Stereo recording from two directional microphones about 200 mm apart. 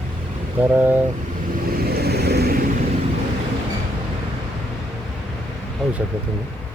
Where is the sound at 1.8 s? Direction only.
50° right (ahead or behind).